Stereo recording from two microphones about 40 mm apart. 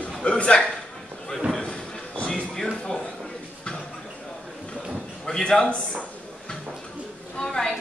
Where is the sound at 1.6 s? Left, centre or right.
Left.